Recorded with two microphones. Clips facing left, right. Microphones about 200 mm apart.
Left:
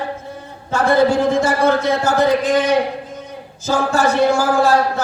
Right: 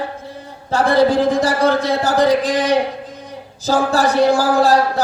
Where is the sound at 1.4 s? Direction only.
35° right (ahead or behind).